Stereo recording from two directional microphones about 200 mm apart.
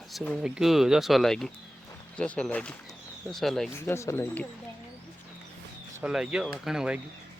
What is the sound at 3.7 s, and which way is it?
Speech, 15° left (ahead or behind).